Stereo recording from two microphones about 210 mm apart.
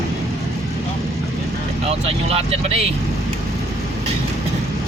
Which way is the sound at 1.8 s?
30° right (ahead or behind).